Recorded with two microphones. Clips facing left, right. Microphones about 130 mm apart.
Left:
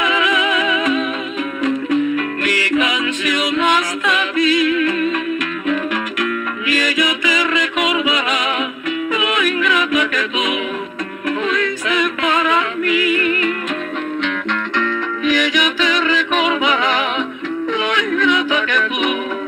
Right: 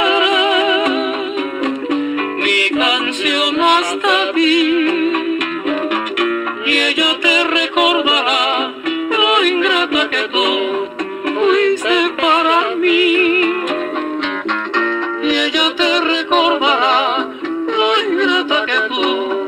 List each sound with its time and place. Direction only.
0.0 s music: 20° right (ahead or behind)
2.4 s music: 20° right (ahead or behind)
6.2 s music: 20° right (ahead or behind)
14.8 s music: 20° right (ahead or behind)
17.7 s yodeling: 20° right (ahead or behind)